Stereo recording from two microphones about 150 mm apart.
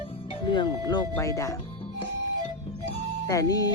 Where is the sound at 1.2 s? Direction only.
20° left (ahead or behind).